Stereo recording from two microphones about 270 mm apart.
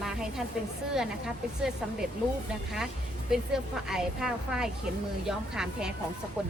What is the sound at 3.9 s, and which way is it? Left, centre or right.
A woman's voice, centre.